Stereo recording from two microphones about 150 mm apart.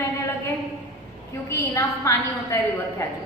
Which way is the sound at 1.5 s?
20° left (ahead or behind).